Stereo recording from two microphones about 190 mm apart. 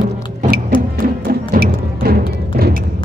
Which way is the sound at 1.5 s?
55° right (ahead or behind).